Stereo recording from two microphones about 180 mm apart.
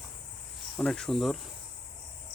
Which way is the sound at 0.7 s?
5° left (ahead or behind).